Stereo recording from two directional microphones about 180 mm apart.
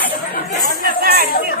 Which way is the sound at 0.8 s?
60° right (ahead or behind).